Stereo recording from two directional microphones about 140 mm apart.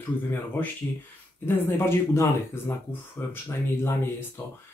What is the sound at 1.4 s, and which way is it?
Speech, 15° left (ahead or behind).